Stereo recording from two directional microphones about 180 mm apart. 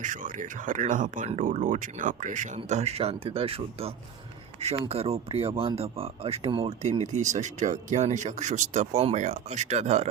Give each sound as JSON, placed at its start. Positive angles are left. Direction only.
{"t": 0.0, "sound": "speech", "side_deg": -45}